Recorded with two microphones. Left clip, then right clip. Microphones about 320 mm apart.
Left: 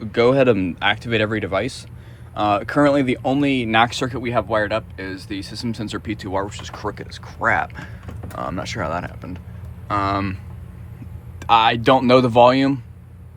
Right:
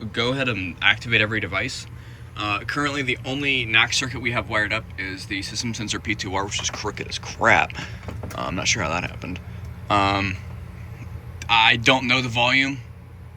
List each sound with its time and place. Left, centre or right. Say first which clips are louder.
0.0 s speech: left 8 dB; centre
11.3 s speech: left 2 dB; centre